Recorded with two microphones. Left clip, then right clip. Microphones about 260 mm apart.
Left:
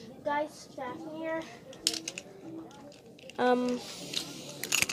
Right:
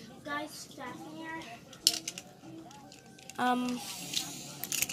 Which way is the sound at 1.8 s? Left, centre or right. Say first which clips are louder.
Right 3 dB; centre.